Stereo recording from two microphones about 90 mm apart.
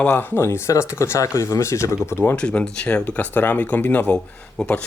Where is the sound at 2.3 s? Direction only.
10° left (ahead or behind).